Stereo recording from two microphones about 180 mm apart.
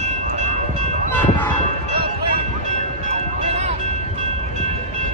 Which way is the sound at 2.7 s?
40° right (ahead or behind).